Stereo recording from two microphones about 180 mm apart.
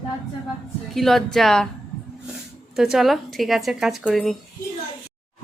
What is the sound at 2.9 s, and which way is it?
A woman's voice, centre (ahead or behind).